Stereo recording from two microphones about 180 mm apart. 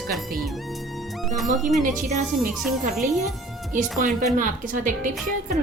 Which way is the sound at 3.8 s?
Centre (ahead or behind).